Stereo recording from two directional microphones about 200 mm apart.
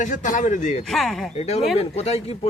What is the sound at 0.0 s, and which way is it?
Speech, 40° left (ahead or behind).